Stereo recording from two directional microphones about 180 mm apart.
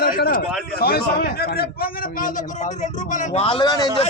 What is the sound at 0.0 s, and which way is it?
A man's voice, 55° left (ahead or behind).